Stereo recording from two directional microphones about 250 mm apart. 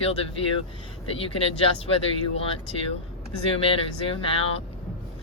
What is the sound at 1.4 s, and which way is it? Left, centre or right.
Speech, left.